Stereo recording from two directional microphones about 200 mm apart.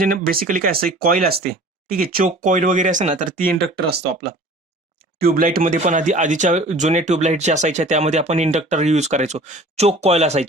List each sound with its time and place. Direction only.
0.0 s speech: 45° right (ahead or behind)
4.9 s speech: 50° right (ahead or behind)